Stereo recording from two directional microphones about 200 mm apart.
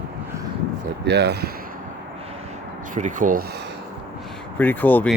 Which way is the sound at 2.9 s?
40° right (ahead or behind).